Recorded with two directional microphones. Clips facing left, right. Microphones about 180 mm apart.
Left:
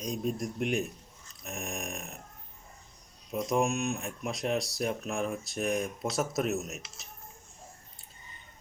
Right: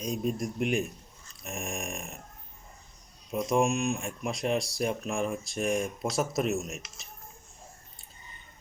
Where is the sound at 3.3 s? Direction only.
Centre (ahead or behind).